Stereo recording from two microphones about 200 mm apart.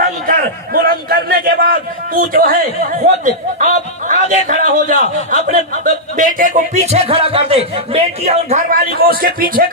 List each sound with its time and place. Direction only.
0.0 s a man's voice: 45° right (ahead or behind)
3.6 s music: 40° right (ahead or behind)